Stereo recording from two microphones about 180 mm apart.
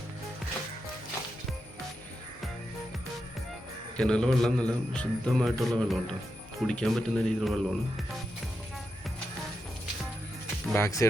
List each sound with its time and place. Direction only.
3.9 s speech: 5° left (ahead or behind)
10.8 s speech: 15° left (ahead or behind)